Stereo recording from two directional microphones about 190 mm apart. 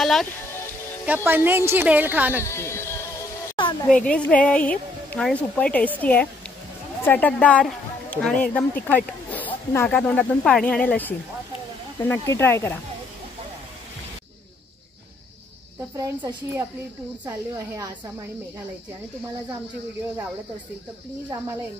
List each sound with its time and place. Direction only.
0.0 s speech: centre (ahead or behind)
1.0 s a woman's voice: 10° right (ahead or behind)
2.4 s a sound: 15° left (ahead or behind)
3.9 s a woman's voice: 5° left (ahead or behind)
16.0 s a woman's voice: 20° right (ahead or behind)